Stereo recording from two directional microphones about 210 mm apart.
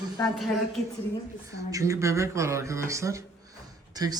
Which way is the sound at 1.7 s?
15° right (ahead or behind).